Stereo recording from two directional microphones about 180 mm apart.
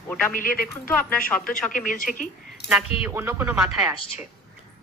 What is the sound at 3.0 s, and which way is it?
Speech, 15° right (ahead or behind).